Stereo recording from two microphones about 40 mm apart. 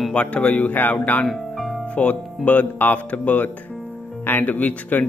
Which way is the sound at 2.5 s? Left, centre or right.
Left.